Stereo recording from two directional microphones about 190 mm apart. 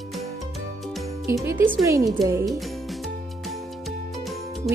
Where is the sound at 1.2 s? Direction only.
15° right (ahead or behind).